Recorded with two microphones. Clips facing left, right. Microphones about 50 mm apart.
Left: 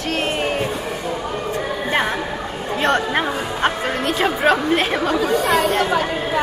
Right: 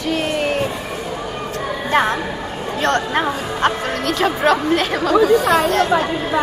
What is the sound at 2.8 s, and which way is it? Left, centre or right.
Speech, centre.